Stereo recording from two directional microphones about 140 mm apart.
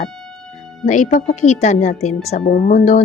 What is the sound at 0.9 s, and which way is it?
A woman's voice, 60° left (ahead or behind).